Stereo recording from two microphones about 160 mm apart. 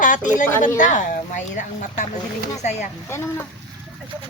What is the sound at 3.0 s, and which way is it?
Speech, 15° left (ahead or behind).